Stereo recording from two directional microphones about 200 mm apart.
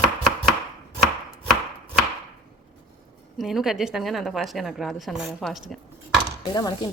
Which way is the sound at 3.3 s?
Centre (ahead or behind).